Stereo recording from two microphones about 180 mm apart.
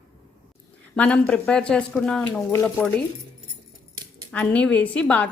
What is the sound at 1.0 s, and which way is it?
Speech, 5° left (ahead or behind).